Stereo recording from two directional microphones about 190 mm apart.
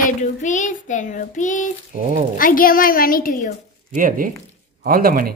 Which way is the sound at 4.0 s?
45° right (ahead or behind).